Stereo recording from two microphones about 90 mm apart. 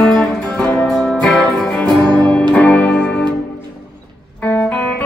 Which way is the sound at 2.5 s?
15° left (ahead or behind).